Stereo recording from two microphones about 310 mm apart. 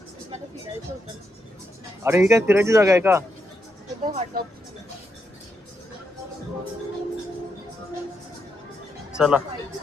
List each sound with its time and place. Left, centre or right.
2.0 s speech: centre
4.0 s speech: right
9.1 s speech: centre